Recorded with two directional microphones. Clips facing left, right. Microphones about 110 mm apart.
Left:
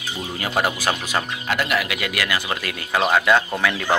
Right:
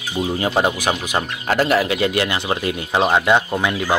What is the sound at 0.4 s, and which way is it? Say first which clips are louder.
Speech: right 2 dB; 25° right (ahead or behind).